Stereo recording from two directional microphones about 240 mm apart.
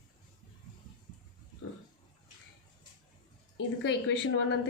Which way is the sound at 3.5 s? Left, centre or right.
Left.